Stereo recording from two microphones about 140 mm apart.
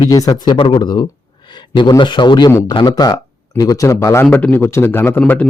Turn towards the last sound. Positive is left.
turn(degrees=10)  # may be behind; listen again after turning